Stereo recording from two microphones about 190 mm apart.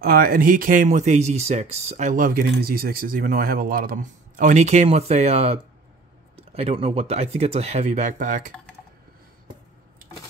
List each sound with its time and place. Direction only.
0.0 s speech: 50° right (ahead or behind)